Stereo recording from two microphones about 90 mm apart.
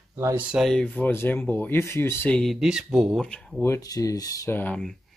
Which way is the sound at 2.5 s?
5° right (ahead or behind).